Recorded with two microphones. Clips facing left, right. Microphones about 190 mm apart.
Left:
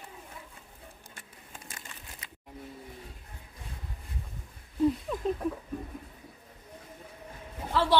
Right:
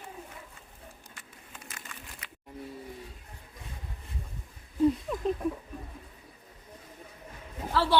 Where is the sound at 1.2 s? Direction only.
30° left (ahead or behind).